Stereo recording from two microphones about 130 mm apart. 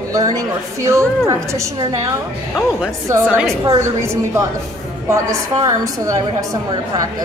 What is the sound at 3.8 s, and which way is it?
A woman's voice, 20° right (ahead or behind).